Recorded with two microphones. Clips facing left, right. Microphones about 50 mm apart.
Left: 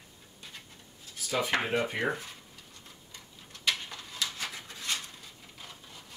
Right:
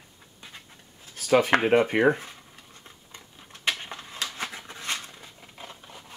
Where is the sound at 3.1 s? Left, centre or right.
Right.